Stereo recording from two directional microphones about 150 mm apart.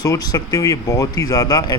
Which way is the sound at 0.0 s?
25° left (ahead or behind).